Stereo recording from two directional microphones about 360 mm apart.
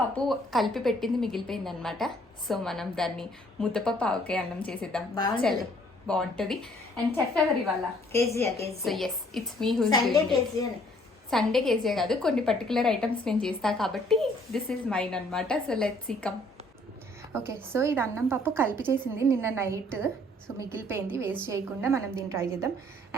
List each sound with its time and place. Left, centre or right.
0.3 s a woman's voice: centre
8.1 s a woman's voice: centre
17.3 s a woman's voice: centre